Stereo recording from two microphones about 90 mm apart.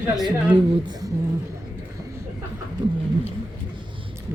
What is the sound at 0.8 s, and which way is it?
Speech, 45° right (ahead or behind).